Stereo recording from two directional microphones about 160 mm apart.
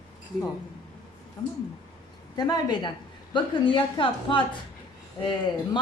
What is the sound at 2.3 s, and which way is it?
A woman's voice, 25° left (ahead or behind).